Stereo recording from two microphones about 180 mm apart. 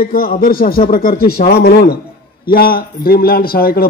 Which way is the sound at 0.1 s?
55° left (ahead or behind).